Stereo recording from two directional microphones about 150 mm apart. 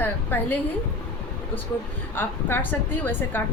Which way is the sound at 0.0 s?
10° left (ahead or behind).